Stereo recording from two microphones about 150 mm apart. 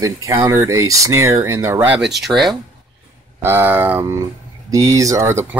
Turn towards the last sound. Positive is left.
turn(degrees=-15)  # may be behind; listen again after turning